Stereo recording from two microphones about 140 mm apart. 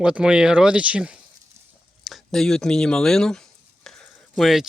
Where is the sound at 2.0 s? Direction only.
Centre (ahead or behind).